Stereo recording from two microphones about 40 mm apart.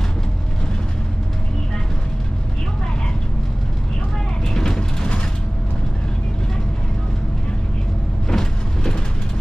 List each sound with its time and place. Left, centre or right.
4.6 s vehicle: centre
8.3 s vehicle: centre